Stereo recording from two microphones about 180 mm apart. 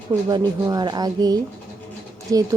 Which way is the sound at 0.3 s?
20° right (ahead or behind).